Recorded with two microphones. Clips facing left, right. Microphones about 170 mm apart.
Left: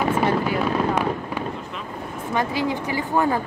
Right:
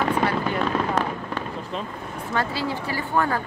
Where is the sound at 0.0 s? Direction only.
10° left (ahead or behind).